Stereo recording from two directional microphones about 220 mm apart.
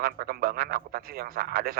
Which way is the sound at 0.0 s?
40° right (ahead or behind).